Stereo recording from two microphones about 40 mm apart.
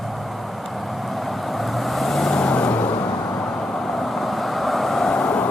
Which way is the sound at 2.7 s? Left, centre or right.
Left.